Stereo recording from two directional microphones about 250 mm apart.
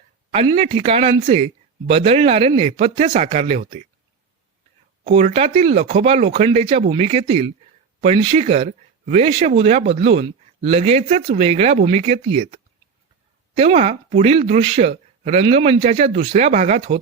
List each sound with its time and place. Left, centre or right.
0.3 s speech: right
5.0 s speech: right
13.6 s speech: right